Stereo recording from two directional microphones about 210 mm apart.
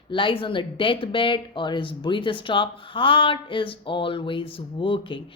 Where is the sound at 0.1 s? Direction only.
25° left (ahead or behind).